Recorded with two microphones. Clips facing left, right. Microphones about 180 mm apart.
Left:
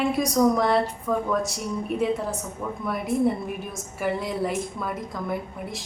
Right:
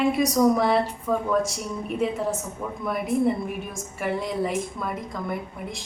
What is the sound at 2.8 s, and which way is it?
A woman's voice, centre (ahead or behind).